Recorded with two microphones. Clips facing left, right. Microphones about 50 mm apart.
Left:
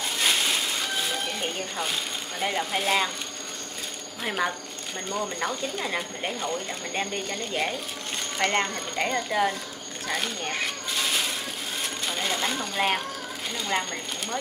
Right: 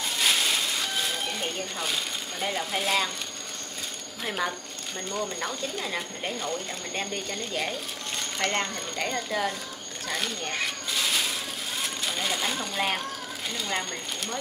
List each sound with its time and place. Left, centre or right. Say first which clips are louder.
0.2 s music: even; centre
2.4 s speech: left 2 dB; centre
4.2 s speech: left 2 dB; centre
10.0 s coin: left 2 dB; centre
11.8 s a sound: left 1 dB; centre
13.5 s speech: left 3 dB; centre